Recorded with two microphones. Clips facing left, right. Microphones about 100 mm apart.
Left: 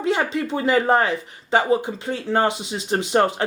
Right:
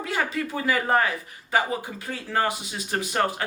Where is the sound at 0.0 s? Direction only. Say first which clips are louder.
Left 6 dB; 25° left (ahead or behind).